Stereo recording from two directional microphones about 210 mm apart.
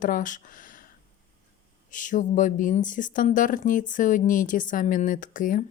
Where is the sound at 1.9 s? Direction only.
40° left (ahead or behind).